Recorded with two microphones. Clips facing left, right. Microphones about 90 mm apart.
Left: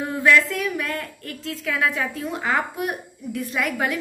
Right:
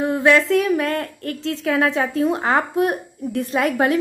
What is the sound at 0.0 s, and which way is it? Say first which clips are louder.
A woman's voice: right 3 dB; 25° right (ahead or behind).